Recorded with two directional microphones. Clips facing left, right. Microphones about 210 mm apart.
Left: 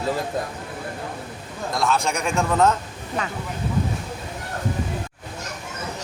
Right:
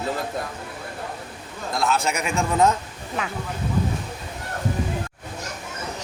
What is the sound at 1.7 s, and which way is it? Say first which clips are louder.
A man's voice: even; centre (ahead or behind).